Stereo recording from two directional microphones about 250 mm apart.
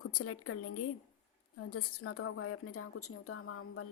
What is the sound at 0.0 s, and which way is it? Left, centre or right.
A woman's voice, left.